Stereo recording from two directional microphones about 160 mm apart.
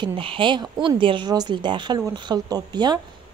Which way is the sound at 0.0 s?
30° right (ahead or behind).